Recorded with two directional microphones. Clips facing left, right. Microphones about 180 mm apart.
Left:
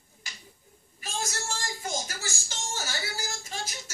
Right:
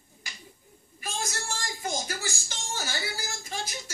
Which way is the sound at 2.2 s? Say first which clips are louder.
Right 1 dB; 15° right (ahead or behind).